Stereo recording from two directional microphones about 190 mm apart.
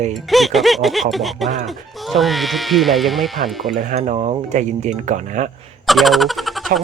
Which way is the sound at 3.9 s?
35° right (ahead or behind).